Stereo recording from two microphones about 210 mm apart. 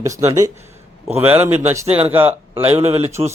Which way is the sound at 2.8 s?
30° right (ahead or behind).